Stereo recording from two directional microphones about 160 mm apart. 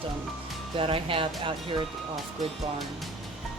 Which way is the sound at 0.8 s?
35° right (ahead or behind).